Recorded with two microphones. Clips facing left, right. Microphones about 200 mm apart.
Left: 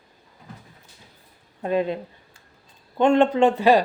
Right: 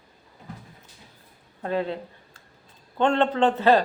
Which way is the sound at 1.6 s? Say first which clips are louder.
Left 4 dB; 15° left (ahead or behind).